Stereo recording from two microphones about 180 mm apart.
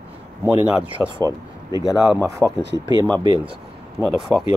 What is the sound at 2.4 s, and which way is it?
Speech, 10° left (ahead or behind).